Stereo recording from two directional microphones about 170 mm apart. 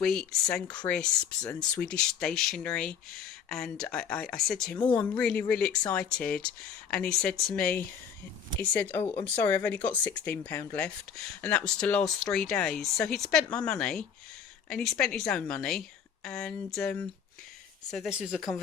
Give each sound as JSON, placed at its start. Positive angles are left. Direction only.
{"t": 0.0, "sound": "speech", "side_deg": 0}
{"t": 4.8, "sound": "speech", "side_deg": 25}
{"t": 5.1, "sound": "speech", "side_deg": 5}